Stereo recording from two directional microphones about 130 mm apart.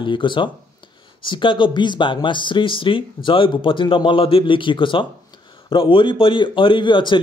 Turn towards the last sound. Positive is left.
turn(degrees=40)  # may be behind; listen again after turning